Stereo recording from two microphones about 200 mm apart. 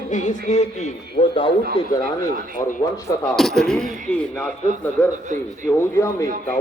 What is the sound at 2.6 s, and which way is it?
Speech, 15° left (ahead or behind).